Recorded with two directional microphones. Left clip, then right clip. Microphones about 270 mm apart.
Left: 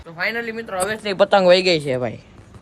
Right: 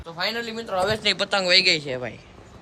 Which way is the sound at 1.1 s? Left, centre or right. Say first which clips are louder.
Left 10 dB; centre.